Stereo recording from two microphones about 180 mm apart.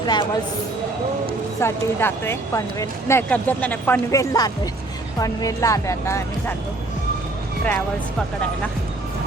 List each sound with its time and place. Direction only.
0.0 s speech: 25° left (ahead or behind)
1.6 s speech: 15° left (ahead or behind)